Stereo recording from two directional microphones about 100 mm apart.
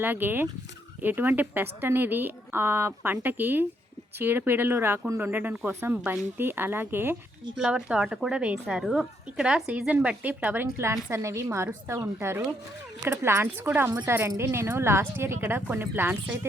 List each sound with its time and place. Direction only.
0.0 s a woman's voice: 20° right (ahead or behind)
7.5 s a woman's voice: 5° right (ahead or behind)